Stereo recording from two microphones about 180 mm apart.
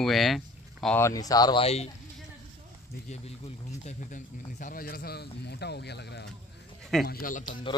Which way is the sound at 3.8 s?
45° left (ahead or behind).